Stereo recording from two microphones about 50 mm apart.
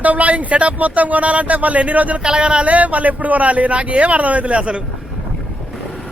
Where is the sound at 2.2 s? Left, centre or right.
Centre.